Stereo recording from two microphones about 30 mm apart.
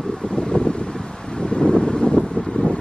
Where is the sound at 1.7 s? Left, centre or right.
Left.